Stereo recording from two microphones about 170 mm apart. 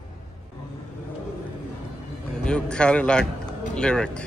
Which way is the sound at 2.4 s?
5° left (ahead or behind).